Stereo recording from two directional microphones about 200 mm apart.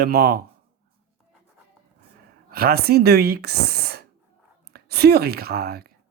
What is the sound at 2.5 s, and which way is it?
A woman's voice, 50° right (ahead or behind).